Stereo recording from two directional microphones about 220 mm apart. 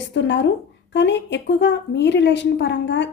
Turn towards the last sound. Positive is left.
turn(degrees=55)  # may be behind; listen again after turning